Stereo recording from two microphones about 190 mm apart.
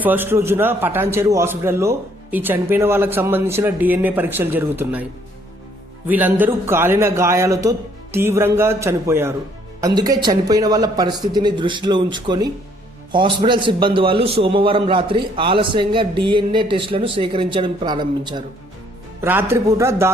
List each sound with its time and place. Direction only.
0.0 s a man's voice: 10° right (ahead or behind)
6.1 s a man's voice: 10° right (ahead or behind)
19.2 s a man's voice: 10° right (ahead or behind)